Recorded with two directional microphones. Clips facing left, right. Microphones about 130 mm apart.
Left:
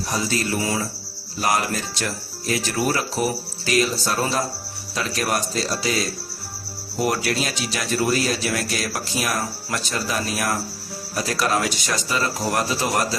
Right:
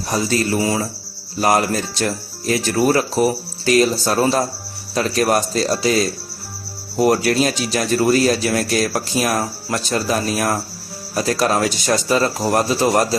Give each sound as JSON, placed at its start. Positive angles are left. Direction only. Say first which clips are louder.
{"t": 0.1, "sound": "speech", "louder": "right 6 dB", "side_deg": -40}